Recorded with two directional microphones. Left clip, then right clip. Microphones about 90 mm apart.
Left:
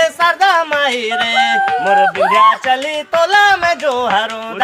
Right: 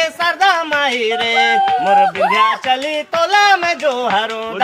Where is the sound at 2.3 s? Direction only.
45° left (ahead or behind).